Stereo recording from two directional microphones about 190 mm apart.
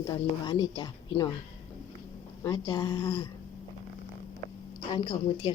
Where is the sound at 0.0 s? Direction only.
25° left (ahead or behind).